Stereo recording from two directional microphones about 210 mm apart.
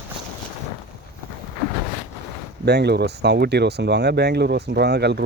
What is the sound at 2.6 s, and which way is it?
Speech, 50° right (ahead or behind).